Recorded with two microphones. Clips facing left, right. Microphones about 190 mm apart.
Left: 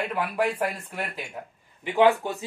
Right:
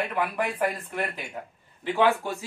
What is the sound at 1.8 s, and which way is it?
Speech, 15° left (ahead or behind).